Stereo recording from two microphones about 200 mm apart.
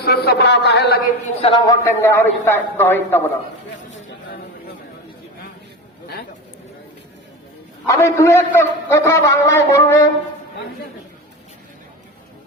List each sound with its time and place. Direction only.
0.0 s a man's voice: 50° left (ahead or behind)
1.4 s a man's voice: 25° left (ahead or behind)
7.9 s a man's voice: 15° left (ahead or behind)